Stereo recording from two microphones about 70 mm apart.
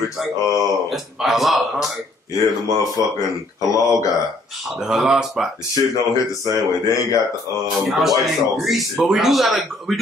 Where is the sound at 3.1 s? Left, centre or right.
Left.